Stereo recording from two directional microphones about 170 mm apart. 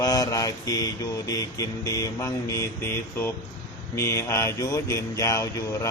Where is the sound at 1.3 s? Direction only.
20° left (ahead or behind).